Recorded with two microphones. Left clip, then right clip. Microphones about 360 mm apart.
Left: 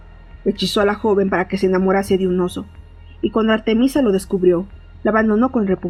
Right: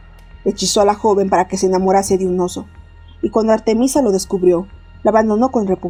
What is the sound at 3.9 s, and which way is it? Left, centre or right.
Speech, right.